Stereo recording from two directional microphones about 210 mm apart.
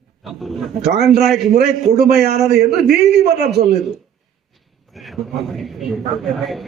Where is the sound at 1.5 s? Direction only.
50° right (ahead or behind).